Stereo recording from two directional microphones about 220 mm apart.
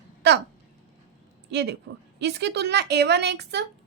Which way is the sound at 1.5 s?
50° right (ahead or behind).